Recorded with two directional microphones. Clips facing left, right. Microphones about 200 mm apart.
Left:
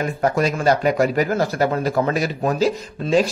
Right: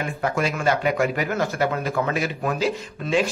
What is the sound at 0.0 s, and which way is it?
Speech, 40° left (ahead or behind).